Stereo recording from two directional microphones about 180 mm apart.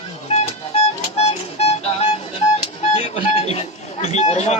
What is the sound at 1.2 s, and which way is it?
Music, 35° left (ahead or behind).